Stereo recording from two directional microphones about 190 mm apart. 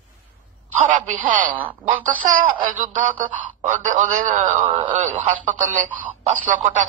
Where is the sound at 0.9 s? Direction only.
45° right (ahead or behind).